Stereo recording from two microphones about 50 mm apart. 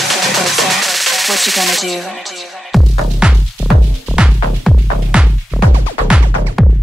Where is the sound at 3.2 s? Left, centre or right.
Centre.